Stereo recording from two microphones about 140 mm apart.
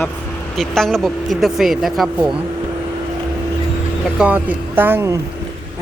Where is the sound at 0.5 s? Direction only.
5° left (ahead or behind).